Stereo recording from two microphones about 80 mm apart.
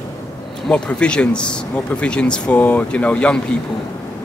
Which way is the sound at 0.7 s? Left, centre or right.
Centre.